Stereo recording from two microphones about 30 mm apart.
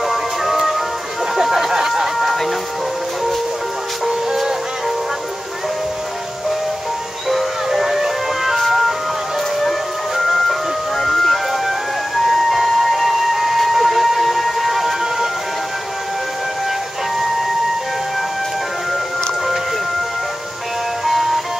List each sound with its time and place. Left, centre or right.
0.1 s music: centre
1.3 s a sound: centre
2.1 s music: centre
7.2 s music: centre
8.5 s ice cream truck: centre
10.1 s music: centre
12.3 s train: centre
21.0 s music: centre